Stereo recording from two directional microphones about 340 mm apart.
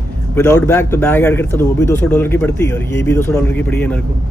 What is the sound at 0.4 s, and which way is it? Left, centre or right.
Speech, centre.